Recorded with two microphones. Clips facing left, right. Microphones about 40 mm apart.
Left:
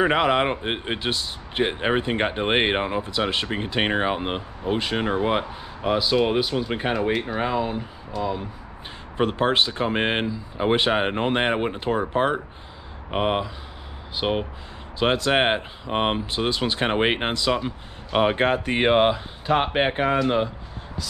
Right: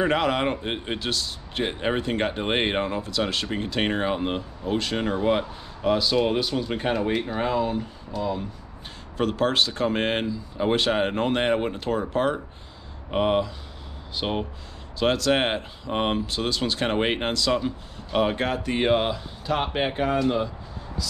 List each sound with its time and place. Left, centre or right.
0.0 s speech: left
18.2 s speech: left